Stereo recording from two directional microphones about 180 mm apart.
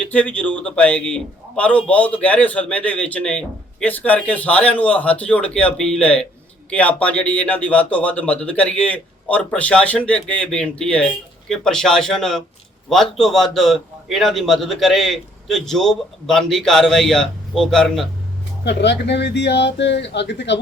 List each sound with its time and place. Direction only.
0.0 s a man's voice: 10° left (ahead or behind)
18.6 s speech: 70° left (ahead or behind)